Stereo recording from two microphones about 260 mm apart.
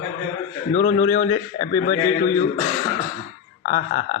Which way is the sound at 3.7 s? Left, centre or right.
Left.